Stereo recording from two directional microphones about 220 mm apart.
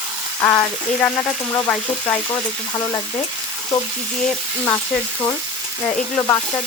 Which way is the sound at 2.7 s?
15° left (ahead or behind).